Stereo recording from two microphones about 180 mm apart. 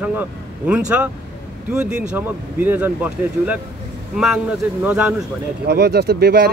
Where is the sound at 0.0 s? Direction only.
10° right (ahead or behind).